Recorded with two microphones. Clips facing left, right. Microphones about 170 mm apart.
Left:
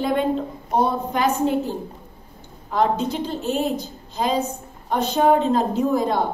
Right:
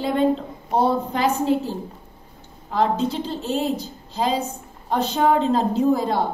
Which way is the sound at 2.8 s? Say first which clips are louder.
Even; 30° right (ahead or behind).